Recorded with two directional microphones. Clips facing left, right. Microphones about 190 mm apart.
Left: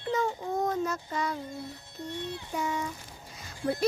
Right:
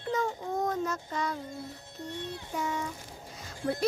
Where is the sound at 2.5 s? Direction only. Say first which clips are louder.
Left 1 dB; 15° left (ahead or behind).